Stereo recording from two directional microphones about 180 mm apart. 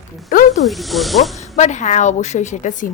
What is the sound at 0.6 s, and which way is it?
Speech, centre (ahead or behind).